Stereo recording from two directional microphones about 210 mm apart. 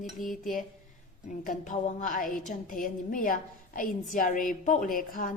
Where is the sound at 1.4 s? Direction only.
40° left (ahead or behind).